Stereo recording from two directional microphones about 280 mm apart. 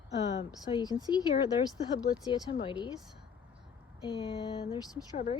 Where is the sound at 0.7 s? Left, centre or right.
Centre.